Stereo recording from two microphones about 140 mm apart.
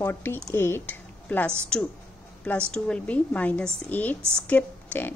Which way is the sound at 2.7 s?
10° left (ahead or behind).